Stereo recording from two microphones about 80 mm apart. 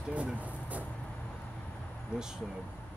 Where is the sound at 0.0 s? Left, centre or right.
Centre.